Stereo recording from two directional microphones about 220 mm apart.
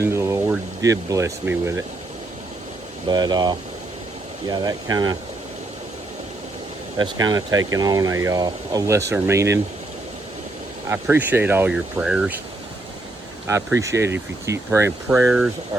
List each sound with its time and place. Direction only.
0.0 s speech: 10° right (ahead or behind)
3.1 s speech: 20° right (ahead or behind)
7.0 s speech: 20° right (ahead or behind)
10.8 s speech: 10° right (ahead or behind)
13.5 s speech: 15° right (ahead or behind)